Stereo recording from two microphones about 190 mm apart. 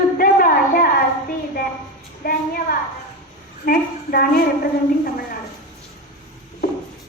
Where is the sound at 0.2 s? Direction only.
50° left (ahead or behind).